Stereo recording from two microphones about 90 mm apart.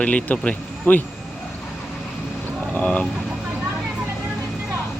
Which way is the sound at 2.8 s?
15° left (ahead or behind).